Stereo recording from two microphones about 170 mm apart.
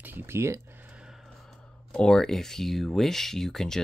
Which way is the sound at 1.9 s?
5° left (ahead or behind).